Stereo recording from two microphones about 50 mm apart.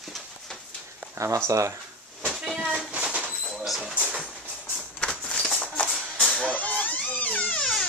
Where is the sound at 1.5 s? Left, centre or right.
Right.